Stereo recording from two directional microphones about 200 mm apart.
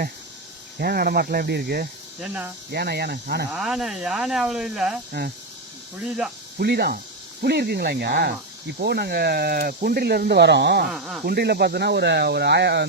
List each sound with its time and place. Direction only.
0.8 s speech: 50° right (ahead or behind)
2.2 s speech: 5° right (ahead or behind)
2.7 s speech: 55° right (ahead or behind)
3.5 s speech: centre (ahead or behind)
5.2 s speech: 55° right (ahead or behind)
6.0 s speech: 5° right (ahead or behind)
6.6 s speech: 50° right (ahead or behind)
10.9 s speech: 5° right (ahead or behind)
11.3 s speech: 50° right (ahead or behind)